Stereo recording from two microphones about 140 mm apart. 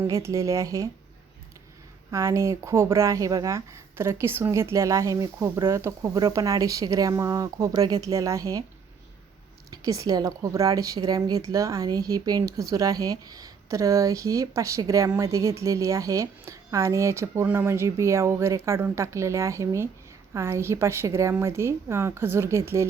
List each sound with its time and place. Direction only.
0.0 s a woman's voice: 20° right (ahead or behind)
2.0 s a woman's voice: 20° right (ahead or behind)
9.6 s a woman's voice: 25° right (ahead or behind)